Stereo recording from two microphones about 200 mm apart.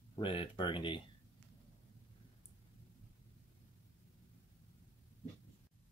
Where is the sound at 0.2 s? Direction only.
25° left (ahead or behind).